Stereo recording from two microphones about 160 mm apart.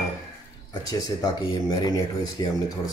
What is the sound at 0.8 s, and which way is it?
Speech, 25° left (ahead or behind).